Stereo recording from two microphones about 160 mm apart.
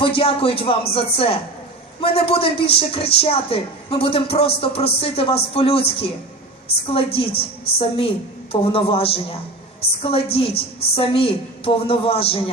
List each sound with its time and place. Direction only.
0.0 s a man's voice: 35° left (ahead or behind)